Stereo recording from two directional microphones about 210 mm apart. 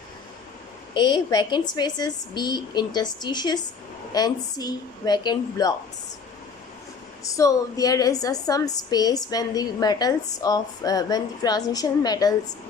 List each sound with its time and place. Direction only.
0.9 s a woman's voice: 20° left (ahead or behind)
7.3 s a woman's voice: 15° left (ahead or behind)